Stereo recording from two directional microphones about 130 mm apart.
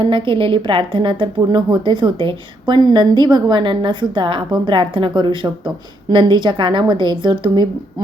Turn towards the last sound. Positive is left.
turn(degrees=-35)  # may be behind; listen again after turning